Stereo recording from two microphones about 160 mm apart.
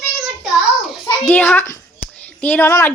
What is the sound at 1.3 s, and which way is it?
Speech, 10° left (ahead or behind).